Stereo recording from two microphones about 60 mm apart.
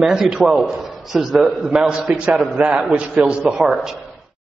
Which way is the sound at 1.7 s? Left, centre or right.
Centre.